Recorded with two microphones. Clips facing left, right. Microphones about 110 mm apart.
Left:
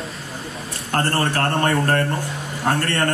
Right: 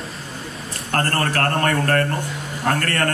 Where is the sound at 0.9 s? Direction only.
25° left (ahead or behind).